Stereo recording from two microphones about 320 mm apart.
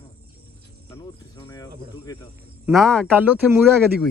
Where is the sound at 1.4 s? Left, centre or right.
Centre.